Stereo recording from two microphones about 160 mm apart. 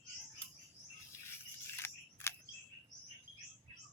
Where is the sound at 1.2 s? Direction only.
15° left (ahead or behind).